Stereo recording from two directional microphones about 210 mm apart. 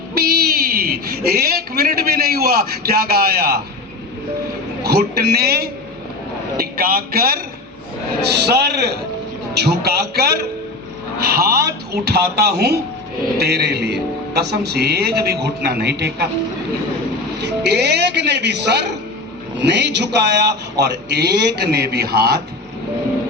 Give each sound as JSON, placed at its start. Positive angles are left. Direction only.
{"t": 0.1, "sound": "a sound", "side_deg": -45}
{"t": 4.8, "sound": "a man's voice", "side_deg": -50}
{"t": 8.4, "sound": "a man's voice", "side_deg": -50}
{"t": 17.4, "sound": "a man's voice", "side_deg": -50}